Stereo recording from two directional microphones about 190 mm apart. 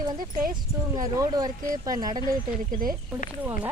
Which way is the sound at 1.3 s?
20° right (ahead or behind).